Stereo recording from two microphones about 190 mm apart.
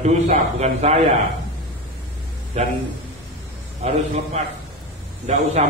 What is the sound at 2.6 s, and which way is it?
Speech, 35° right (ahead or behind).